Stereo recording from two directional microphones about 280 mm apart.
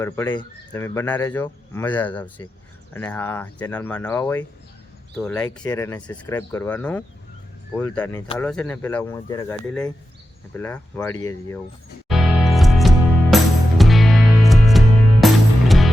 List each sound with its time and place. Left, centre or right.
0.0 s speech: centre
12.0 s music: centre